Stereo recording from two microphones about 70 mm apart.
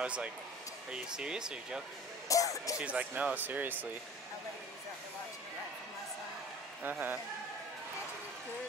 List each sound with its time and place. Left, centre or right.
0.0 s speech: centre
2.2 s speech: left
2.8 s speech: centre
6.8 s speech: right